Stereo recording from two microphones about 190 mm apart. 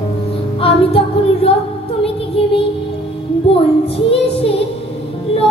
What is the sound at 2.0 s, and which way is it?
Music, 30° left (ahead or behind).